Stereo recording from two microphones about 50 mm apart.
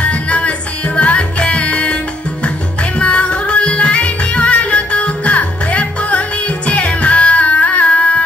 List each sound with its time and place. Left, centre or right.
0.0 s music: left
3.0 s music: left